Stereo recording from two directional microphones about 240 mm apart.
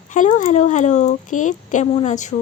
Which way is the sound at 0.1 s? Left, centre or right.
Left.